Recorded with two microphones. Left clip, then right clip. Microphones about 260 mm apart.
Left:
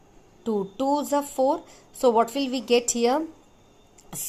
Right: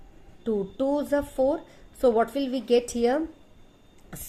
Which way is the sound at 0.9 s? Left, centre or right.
Left.